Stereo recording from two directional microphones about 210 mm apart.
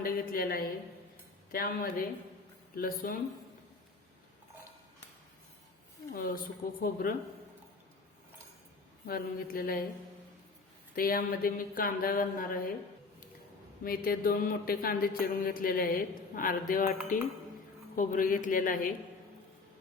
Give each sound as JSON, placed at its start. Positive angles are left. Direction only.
{"t": 0.0, "sound": "mantra", "side_deg": 45}
{"t": 6.2, "sound": "mantra", "side_deg": 40}
{"t": 9.0, "sound": "mantra", "side_deg": 45}
{"t": 10.9, "sound": "mantra", "side_deg": 45}
{"t": 13.8, "sound": "mantra", "side_deg": 45}
{"t": 16.3, "sound": "a man's voice", "side_deg": 40}